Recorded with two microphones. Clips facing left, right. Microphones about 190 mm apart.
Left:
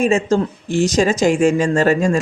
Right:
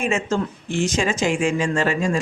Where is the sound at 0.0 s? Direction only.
35° left (ahead or behind).